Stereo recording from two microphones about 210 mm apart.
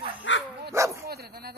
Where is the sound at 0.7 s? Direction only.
15° right (ahead or behind).